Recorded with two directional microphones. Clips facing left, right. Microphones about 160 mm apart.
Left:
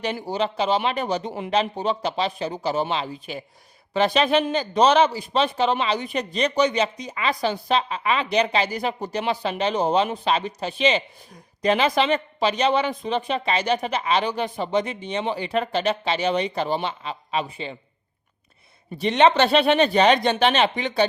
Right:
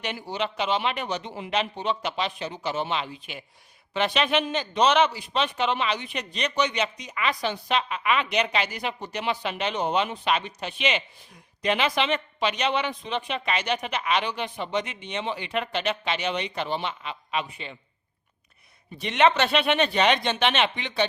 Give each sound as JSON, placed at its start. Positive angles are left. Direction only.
{"t": 0.0, "sound": "speech", "side_deg": 35}
{"t": 18.9, "sound": "speech", "side_deg": 35}